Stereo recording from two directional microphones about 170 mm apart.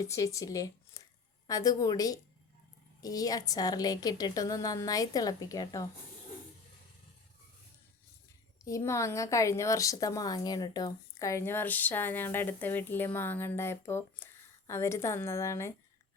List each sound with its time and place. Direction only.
0.0 s a woman's voice: 20° left (ahead or behind)
8.6 s speech: 20° left (ahead or behind)